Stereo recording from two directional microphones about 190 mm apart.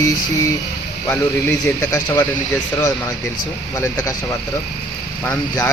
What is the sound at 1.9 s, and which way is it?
Speech, 20° left (ahead or behind).